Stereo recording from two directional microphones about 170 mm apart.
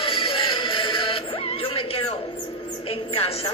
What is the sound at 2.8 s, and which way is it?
Music, 35° left (ahead or behind).